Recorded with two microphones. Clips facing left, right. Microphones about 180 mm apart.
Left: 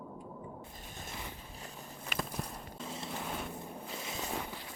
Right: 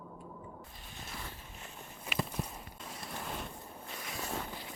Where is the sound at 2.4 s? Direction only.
5° right (ahead or behind).